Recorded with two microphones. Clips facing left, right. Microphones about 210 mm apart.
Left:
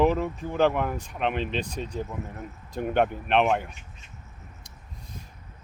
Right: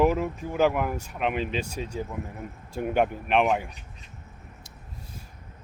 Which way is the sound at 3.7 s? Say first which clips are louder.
Right 1 dB; 35° right (ahead or behind).